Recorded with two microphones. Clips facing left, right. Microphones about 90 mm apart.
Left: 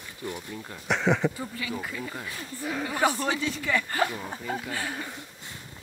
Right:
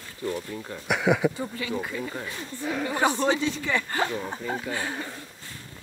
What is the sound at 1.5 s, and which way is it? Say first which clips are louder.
Speech: right 3 dB; 35° right (ahead or behind).